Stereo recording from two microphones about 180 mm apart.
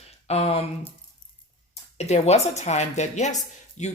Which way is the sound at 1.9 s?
40° left (ahead or behind).